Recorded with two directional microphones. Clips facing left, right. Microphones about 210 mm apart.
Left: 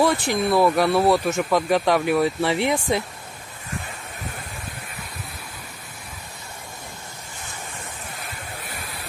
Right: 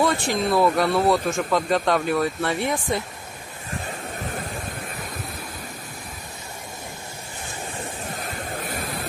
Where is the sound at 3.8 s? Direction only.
45° right (ahead or behind).